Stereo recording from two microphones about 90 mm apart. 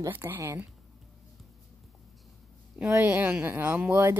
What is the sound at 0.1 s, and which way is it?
Speech, 25° right (ahead or behind).